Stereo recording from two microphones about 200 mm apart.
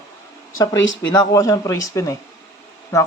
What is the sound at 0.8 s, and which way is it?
Speech, 70° left (ahead or behind).